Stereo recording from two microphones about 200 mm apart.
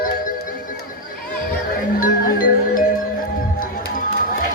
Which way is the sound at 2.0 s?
45° left (ahead or behind).